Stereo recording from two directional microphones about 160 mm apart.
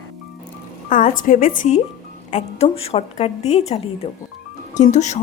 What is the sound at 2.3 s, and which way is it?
A woman's voice, 40° left (ahead or behind).